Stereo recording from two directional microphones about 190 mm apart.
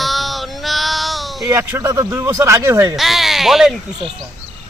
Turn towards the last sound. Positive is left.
turn(degrees=0)  # may be behind; listen again after turning